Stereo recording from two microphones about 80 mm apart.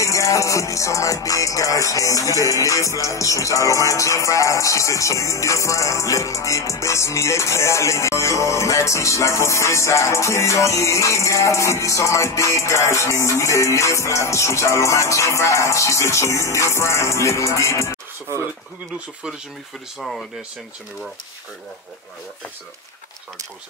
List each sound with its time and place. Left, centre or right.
0.0 s music: left
20.0 s speech: centre